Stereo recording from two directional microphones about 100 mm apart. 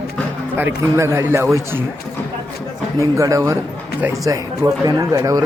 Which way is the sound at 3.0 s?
35° right (ahead or behind).